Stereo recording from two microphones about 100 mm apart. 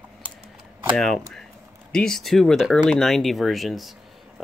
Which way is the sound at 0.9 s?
Centre (ahead or behind).